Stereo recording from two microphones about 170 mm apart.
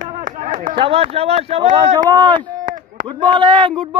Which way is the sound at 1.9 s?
25° right (ahead or behind).